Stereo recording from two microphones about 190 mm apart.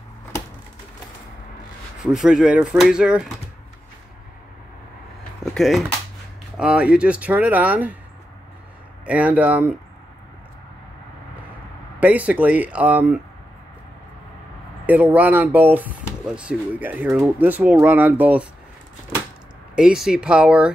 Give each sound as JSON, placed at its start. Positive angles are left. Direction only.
{"t": 2.0, "sound": "speech", "side_deg": -5}
{"t": 5.4, "sound": "a sound", "side_deg": 0}
{"t": 6.5, "sound": "speech", "side_deg": -5}
{"t": 9.0, "sound": "speech", "side_deg": -5}
{"t": 12.0, "sound": "speech", "side_deg": -10}
{"t": 14.9, "sound": "speech", "side_deg": -10}
{"t": 19.7, "sound": "speech", "side_deg": -5}